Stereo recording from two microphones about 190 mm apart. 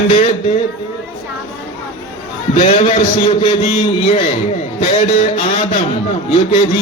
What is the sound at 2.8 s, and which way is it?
A man's voice, 30° left (ahead or behind).